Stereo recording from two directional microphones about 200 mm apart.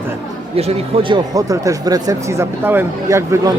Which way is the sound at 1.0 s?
20° right (ahead or behind).